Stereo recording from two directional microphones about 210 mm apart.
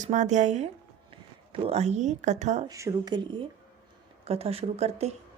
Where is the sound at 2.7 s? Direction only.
15° right (ahead or behind).